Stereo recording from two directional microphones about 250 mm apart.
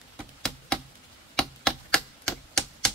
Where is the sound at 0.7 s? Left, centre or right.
Centre.